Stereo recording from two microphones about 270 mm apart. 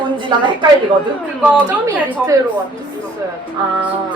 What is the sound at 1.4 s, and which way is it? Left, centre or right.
Speech, centre.